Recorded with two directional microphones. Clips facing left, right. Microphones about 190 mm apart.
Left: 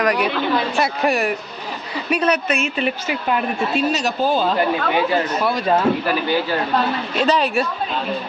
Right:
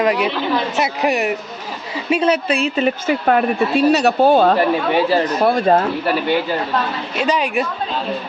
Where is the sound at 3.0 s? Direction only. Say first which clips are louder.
Right 6 dB; 55° right (ahead or behind).